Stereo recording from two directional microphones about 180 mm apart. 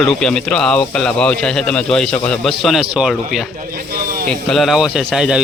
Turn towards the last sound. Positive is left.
turn(degrees=-5)  # may be behind; listen again after turning